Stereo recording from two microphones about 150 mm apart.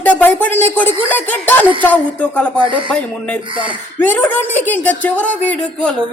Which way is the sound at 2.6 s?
35° right (ahead or behind).